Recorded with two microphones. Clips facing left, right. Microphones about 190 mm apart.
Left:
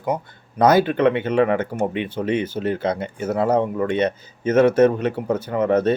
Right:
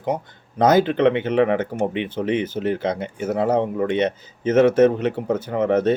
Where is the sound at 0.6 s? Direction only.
20° right (ahead or behind).